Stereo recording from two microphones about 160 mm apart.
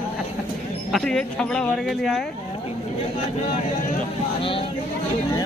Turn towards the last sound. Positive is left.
turn(degrees=35)  # may be behind; listen again after turning